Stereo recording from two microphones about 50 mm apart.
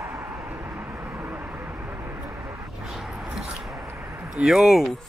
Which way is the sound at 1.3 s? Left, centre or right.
Right.